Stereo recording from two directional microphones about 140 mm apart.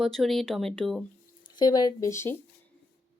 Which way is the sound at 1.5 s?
30° left (ahead or behind).